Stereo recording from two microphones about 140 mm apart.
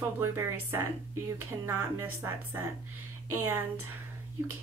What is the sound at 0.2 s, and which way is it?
Speech, 15° right (ahead or behind).